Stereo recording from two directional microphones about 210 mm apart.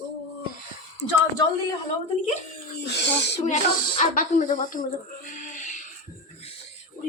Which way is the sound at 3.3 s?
30° left (ahead or behind).